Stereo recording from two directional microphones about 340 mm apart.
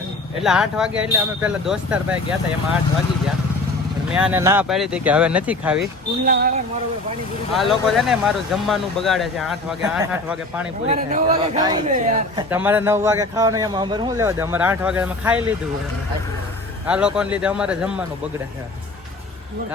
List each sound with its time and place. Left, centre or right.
0.4 s speech: centre
4.1 s speech: centre
6.2 s speech: right
7.5 s speech: centre
10.8 s speech: right
12.5 s speech: centre
16.8 s speech: centre